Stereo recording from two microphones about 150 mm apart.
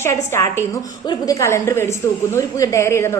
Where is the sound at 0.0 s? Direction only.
20° left (ahead or behind).